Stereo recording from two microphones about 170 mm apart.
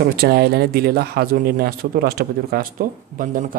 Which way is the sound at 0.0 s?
65° right (ahead or behind).